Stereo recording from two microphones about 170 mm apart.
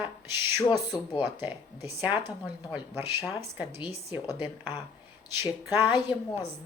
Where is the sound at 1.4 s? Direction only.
15° right (ahead or behind).